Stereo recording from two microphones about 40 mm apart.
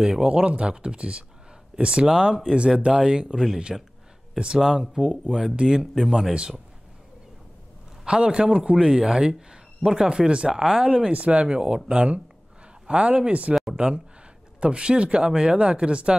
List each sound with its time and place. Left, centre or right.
0.3 s speech: right
2.9 s speech: centre
3.7 s speech: centre
4.7 s speech: centre
8.0 s speech: right
11.1 s speech: right
11.4 s speech: right
13.7 s speech: right